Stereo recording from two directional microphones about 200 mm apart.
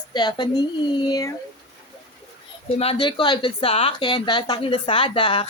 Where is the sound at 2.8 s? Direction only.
30° left (ahead or behind).